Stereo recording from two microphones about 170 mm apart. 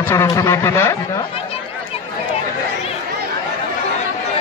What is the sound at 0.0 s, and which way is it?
Speech, 15° left (ahead or behind).